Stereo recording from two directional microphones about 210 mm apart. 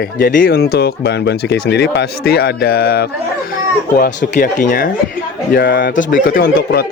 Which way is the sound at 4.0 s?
35° left (ahead or behind).